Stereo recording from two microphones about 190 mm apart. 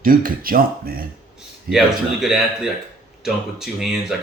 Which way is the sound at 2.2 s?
Centre (ahead or behind).